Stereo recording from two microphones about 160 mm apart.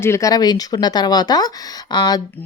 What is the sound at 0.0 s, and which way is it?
Speech, 20° left (ahead or behind).